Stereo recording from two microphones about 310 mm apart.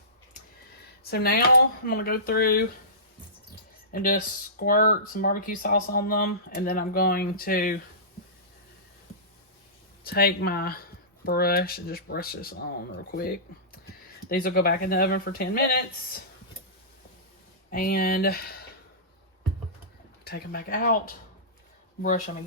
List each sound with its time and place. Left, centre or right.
1.1 s speech: left
3.9 s speech: left
10.0 s speech: left
17.7 s speech: left
20.2 s speech: left